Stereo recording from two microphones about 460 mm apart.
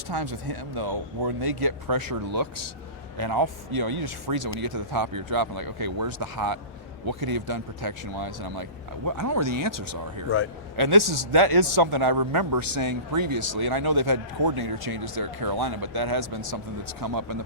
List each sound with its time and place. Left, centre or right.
0.1 s speech: right
9.0 s speech: right
10.2 s speech: left
10.8 s speech: right